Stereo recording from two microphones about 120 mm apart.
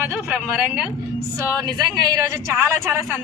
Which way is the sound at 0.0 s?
10° right (ahead or behind).